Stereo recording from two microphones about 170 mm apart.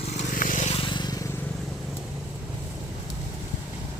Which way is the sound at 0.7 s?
30° left (ahead or behind).